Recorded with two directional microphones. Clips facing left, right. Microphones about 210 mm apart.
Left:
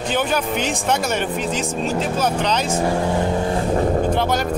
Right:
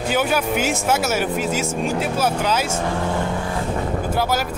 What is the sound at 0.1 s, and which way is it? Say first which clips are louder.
Speech: right 1 dB; 10° right (ahead or behind).